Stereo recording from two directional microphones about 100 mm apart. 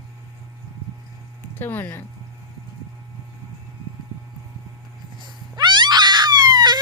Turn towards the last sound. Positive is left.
turn(degrees=-45)  # may be behind; listen again after turning